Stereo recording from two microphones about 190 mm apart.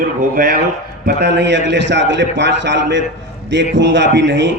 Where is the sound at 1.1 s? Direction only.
60° right (ahead or behind).